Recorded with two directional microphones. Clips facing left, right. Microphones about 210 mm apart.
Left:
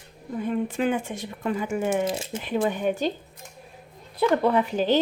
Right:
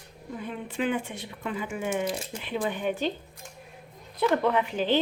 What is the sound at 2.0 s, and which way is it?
Speech, 25° left (ahead or behind).